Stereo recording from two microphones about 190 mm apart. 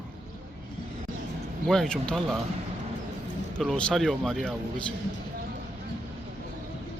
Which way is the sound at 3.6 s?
5° left (ahead or behind).